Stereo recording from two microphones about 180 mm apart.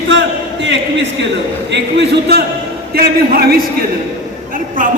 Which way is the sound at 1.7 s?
70° right (ahead or behind).